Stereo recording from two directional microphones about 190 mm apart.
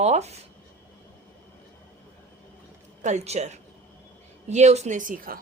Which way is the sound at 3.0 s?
35° right (ahead or behind).